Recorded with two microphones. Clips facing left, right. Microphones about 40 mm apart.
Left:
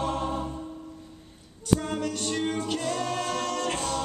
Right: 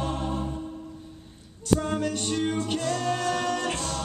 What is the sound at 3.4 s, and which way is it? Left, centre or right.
A capella, centre.